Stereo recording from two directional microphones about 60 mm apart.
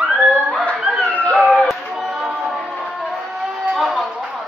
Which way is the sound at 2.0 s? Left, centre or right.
Right.